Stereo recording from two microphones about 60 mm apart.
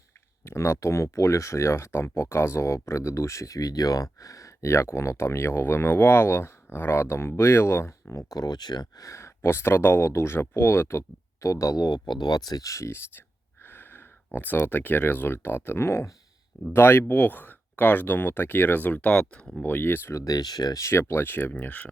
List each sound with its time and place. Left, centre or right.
0.4 s speech: left
8.3 s speech: left
9.1 s speech: left
11.4 s speech: left
12.3 s speech: left
12.9 s speech: left
19.3 s speech: centre
19.6 s speech: left
20.1 s speech: left
20.9 s speech: left